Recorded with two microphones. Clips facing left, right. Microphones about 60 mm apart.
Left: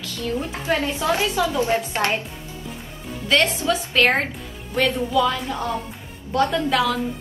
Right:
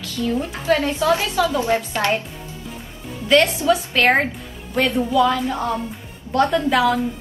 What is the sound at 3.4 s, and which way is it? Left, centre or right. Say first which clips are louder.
A woman's voice: right 4 dB; centre.